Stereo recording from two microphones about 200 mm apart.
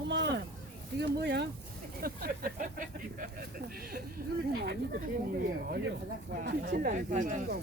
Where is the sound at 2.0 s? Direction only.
45° right (ahead or behind).